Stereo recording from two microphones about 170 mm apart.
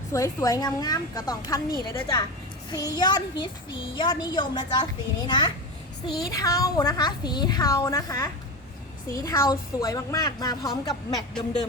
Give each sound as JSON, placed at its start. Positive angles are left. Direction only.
{"t": 0.1, "sound": "a child's voice", "side_deg": 20}